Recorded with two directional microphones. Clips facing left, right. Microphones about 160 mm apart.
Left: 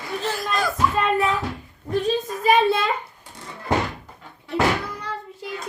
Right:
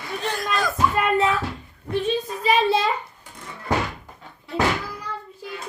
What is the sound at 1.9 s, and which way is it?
Speech, 45° left (ahead or behind).